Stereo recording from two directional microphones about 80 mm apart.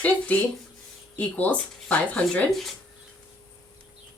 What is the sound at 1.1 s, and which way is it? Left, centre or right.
Speech, centre.